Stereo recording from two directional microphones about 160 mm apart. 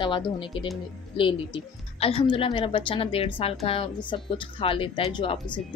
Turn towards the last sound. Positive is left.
turn(degrees=30)  # may be behind; listen again after turning